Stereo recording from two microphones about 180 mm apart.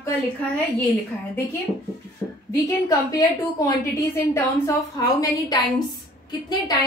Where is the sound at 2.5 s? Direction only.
20° left (ahead or behind).